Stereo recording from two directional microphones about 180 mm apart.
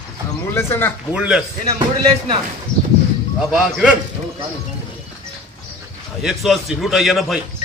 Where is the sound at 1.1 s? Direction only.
5° right (ahead or behind).